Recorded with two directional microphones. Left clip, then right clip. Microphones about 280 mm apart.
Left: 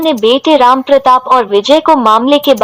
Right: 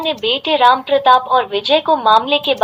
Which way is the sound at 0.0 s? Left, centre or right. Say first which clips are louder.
Left 8 dB; left.